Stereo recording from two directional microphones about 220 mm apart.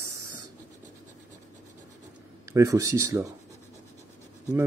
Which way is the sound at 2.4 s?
15° right (ahead or behind).